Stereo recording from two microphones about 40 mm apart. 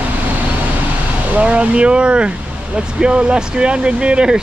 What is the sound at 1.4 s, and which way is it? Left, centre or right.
Speech, right.